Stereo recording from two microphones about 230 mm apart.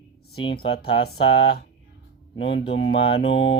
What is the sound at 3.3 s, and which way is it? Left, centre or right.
Speech, left.